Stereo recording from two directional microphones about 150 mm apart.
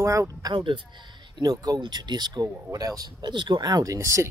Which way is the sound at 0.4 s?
30° right (ahead or behind).